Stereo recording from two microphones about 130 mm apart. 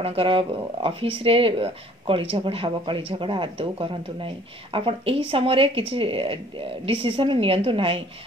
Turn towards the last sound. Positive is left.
turn(degrees=-45)  # may be behind; listen again after turning